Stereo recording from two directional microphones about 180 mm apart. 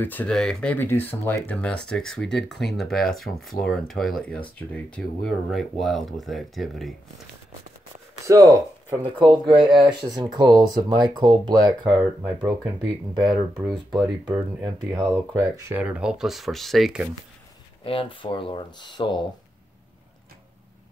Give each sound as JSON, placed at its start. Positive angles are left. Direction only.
{"t": 0.0, "sound": "speech", "side_deg": 10}
{"t": 8.2, "sound": "speech", "side_deg": -20}
{"t": 11.8, "sound": "speech", "side_deg": -10}
{"t": 14.2, "sound": "speech", "side_deg": -20}
{"t": 17.8, "sound": "speech", "side_deg": 30}